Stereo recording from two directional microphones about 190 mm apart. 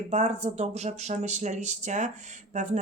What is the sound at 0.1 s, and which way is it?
Speech, 35° right (ahead or behind).